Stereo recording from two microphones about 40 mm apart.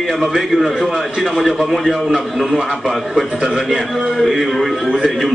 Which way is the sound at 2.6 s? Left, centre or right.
Centre.